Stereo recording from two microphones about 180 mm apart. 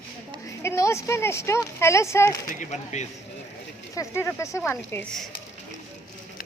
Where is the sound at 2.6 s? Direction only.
40° left (ahead or behind).